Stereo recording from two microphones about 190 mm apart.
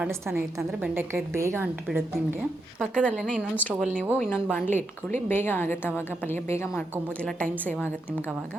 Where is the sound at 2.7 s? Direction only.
5° left (ahead or behind).